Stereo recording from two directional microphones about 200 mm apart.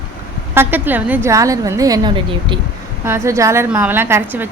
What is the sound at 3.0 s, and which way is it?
Speech, 10° right (ahead or behind).